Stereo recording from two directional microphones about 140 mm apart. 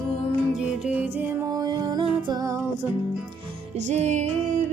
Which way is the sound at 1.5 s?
30° right (ahead or behind).